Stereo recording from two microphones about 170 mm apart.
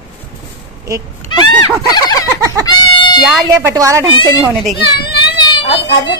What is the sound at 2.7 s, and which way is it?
Goat, 25° left (ahead or behind).